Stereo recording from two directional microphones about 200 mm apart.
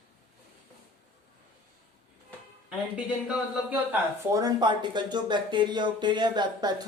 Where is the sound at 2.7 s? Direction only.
5° right (ahead or behind).